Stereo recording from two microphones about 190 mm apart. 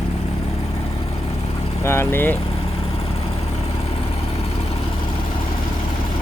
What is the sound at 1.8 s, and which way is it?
Speech, 15° left (ahead or behind).